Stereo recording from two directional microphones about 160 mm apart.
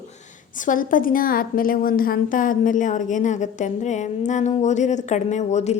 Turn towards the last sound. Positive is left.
turn(degrees=45)  # may be behind; listen again after turning